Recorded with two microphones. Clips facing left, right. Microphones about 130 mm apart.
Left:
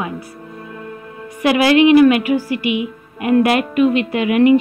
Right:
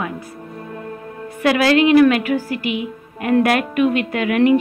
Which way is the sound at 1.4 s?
10° left (ahead or behind).